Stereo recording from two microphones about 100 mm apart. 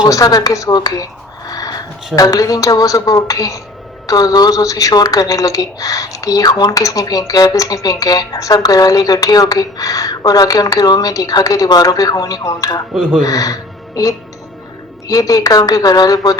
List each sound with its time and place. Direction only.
0.0 s speech: 35° left (ahead or behind)
1.5 s a sound: 35° left (ahead or behind)
2.1 s speech: 35° left (ahead or behind)
12.9 s speech: 5° right (ahead or behind)
13.2 s speech: 35° left (ahead or behind)